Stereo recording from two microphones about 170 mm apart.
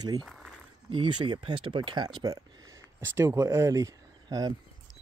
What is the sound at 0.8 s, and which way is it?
Speech, 30° right (ahead or behind).